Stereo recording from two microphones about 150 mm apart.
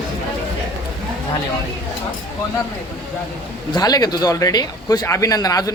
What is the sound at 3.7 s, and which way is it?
Speech, 25° left (ahead or behind).